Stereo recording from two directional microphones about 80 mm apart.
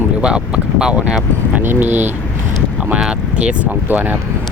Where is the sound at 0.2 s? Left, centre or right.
Centre.